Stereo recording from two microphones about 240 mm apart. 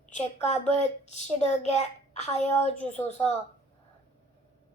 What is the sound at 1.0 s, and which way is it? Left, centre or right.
A child's voice, left.